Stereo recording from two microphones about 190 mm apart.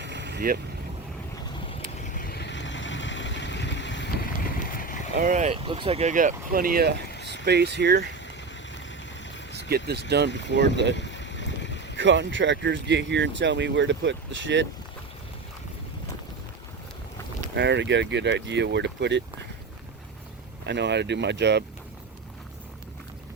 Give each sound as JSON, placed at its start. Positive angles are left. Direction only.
{"t": 0.0, "sound": "vehicle", "side_deg": -65}
{"t": 2.1, "sound": "vehicle", "side_deg": 50}
{"t": 5.1, "sound": "speech", "side_deg": -45}
{"t": 5.6, "sound": "speech", "side_deg": -30}
{"t": 7.4, "sound": "speech", "side_deg": -60}
{"t": 9.5, "sound": "vehicle", "side_deg": -60}
{"t": 10.1, "sound": "speech", "side_deg": -60}
{"t": 10.9, "sound": "boat", "side_deg": 70}
{"t": 11.9, "sound": "speech", "side_deg": -75}
{"t": 17.5, "sound": "speech", "side_deg": -65}
{"t": 20.7, "sound": "speech", "side_deg": -65}